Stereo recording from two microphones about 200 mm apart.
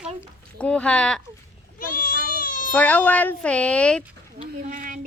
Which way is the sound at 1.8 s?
45° left (ahead or behind).